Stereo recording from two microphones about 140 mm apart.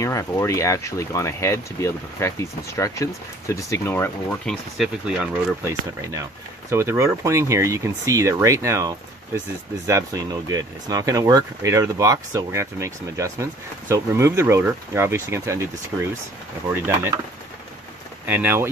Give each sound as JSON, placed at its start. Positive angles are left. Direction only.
{"t": 0.0, "sound": "speech", "side_deg": 20}
{"t": 4.5, "sound": "speech", "side_deg": -5}
{"t": 5.6, "sound": "speech", "side_deg": -20}
{"t": 18.2, "sound": "speech", "side_deg": -15}